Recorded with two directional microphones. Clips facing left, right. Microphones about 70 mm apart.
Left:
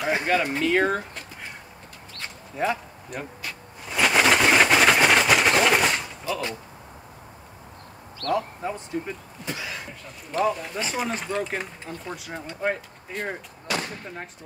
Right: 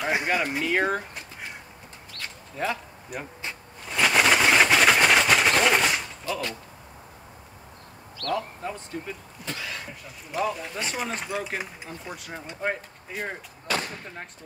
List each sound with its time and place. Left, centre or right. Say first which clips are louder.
0.1 s speech: left 3 dB; centre
2.1 s a sound: left 3 dB; centre
3.1 s speech: left 1 dB; centre
3.8 s a sound: left 1 dB; centre
6.3 s speech: left 2 dB; left
8.2 s speech: left 3 dB; left
9.5 s speech: left 1 dB; centre
12.2 s speech: left 1 dB; centre